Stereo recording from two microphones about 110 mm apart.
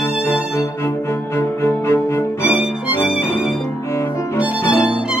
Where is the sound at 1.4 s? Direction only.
25° left (ahead or behind).